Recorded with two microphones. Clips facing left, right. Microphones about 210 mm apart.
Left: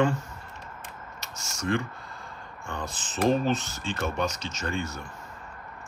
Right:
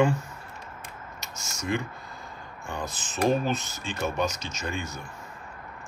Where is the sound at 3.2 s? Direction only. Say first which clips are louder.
Left 1 dB; 10° right (ahead or behind).